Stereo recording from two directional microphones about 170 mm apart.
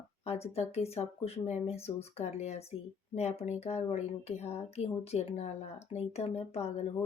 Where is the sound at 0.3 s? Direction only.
40° left (ahead or behind).